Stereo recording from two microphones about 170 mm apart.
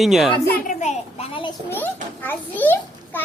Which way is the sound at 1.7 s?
10° left (ahead or behind).